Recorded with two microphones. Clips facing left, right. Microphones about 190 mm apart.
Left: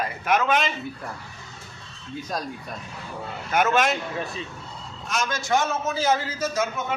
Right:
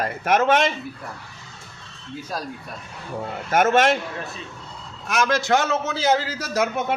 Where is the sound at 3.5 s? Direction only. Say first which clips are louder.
Right 3 dB; 50° right (ahead or behind).